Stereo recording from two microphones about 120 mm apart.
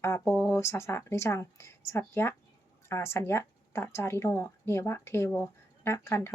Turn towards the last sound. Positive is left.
turn(degrees=20)  # may be behind; listen again after turning